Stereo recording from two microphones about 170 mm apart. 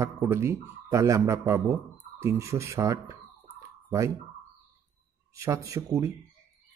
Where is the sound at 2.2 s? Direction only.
15° right (ahead or behind).